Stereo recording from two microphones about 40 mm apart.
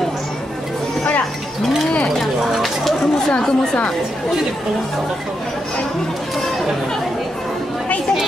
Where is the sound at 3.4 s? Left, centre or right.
Centre.